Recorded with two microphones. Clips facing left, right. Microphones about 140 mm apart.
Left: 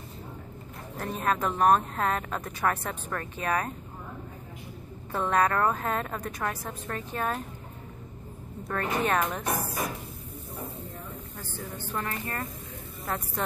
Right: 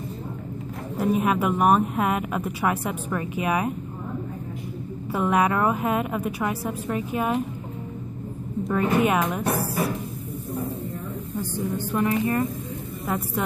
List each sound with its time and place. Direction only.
0.9 s speech: 10° right (ahead or behind)
5.1 s speech: 10° right (ahead or behind)
8.6 s speech: 10° right (ahead or behind)
11.3 s speech: 15° right (ahead or behind)